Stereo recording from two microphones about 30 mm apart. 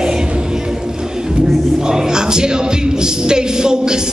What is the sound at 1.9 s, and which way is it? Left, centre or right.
Music, right.